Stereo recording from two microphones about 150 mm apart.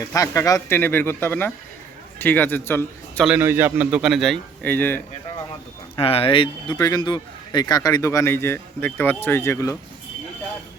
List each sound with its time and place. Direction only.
0.1 s speech: 20° left (ahead or behind)
3.2 s speech: 15° right (ahead or behind)
4.6 s speech: 10° left (ahead or behind)
6.0 s a man's voice: 40° left (ahead or behind); by 9.7 s 20° left (ahead or behind)